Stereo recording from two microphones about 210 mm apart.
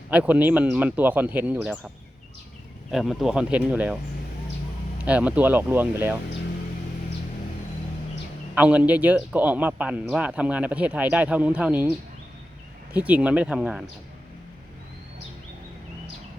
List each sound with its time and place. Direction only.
0.1 s a man's voice: 5° right (ahead or behind)
2.9 s speech: centre (ahead or behind)
5.0 s a man's voice: 5° right (ahead or behind)
8.5 s a man's voice: 5° right (ahead or behind)